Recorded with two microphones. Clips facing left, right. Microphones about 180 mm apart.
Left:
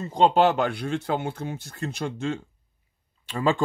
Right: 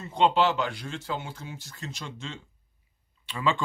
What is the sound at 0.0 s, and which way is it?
Speech, 35° left (ahead or behind).